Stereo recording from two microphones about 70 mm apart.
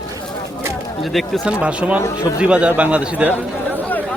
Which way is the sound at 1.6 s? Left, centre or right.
Centre.